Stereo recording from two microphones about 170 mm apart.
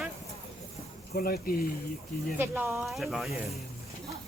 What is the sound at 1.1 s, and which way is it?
Speech, 60° left (ahead or behind).